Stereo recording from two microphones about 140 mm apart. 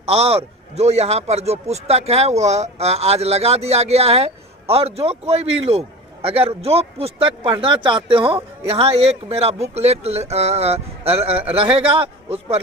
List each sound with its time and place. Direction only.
0.0 s a man's voice: 45° right (ahead or behind)